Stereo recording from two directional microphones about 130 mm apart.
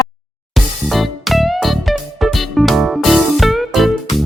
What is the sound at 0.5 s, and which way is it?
Music, centre (ahead or behind).